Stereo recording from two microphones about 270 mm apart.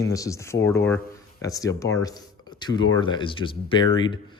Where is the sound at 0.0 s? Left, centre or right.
Centre.